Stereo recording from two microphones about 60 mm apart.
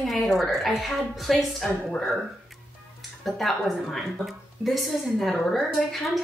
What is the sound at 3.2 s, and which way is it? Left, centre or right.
A woman's voice, centre.